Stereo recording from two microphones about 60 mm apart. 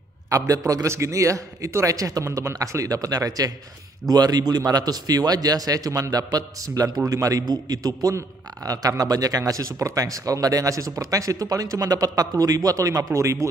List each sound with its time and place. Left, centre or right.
0.3 s a man's voice: right
0.8 s a man's voice: right
2.3 s a man's voice: right